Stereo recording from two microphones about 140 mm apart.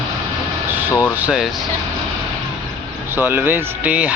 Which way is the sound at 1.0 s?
10° right (ahead or behind).